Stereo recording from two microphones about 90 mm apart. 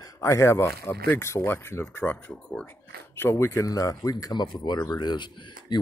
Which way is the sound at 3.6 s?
40° left (ahead or behind).